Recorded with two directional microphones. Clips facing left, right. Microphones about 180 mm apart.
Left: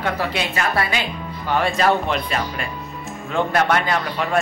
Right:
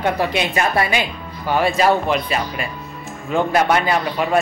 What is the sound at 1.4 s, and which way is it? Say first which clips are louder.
Speech: right 2 dB; 5° right (ahead or behind).